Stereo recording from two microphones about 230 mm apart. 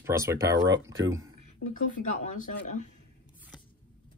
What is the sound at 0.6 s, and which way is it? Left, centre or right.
Speech, right.